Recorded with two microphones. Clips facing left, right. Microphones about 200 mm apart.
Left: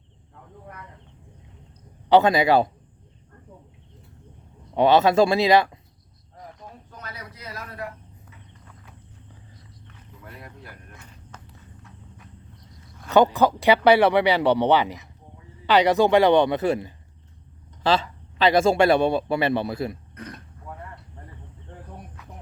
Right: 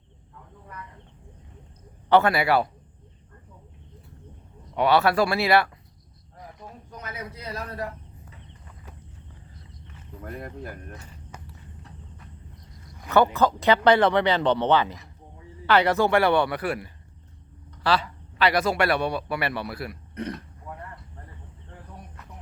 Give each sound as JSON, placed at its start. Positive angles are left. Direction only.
{"t": 2.0, "sound": "a man's voice", "side_deg": 15}
{"t": 4.7, "sound": "a man's voice", "side_deg": 25}
{"t": 7.0, "sound": "a sound", "side_deg": -20}
{"t": 10.2, "sound": "speech", "side_deg": -50}
{"t": 13.1, "sound": "a man's voice", "side_deg": 15}